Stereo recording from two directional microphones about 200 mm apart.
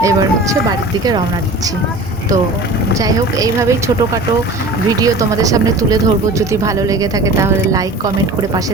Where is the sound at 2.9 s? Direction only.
15° right (ahead or behind).